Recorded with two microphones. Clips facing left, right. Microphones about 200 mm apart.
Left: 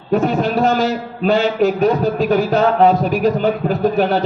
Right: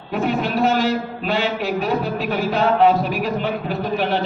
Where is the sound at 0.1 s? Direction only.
40° left (ahead or behind).